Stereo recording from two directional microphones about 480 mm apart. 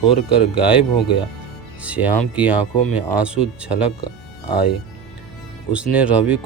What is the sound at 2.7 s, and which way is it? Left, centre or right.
Speech, centre.